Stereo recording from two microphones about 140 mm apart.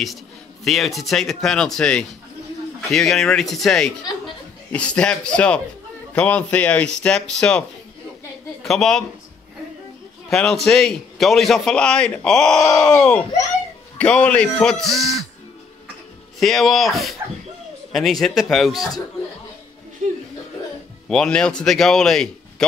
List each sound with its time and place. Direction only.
0.7 s a man's voice: centre (ahead or behind)
8.6 s a man's voice: centre (ahead or behind)
10.3 s a man's voice: 5° left (ahead or behind)
16.3 s a man's voice: centre (ahead or behind)
20.0 s speech: 75° right (ahead or behind)
21.1 s a man's voice: 5° left (ahead or behind)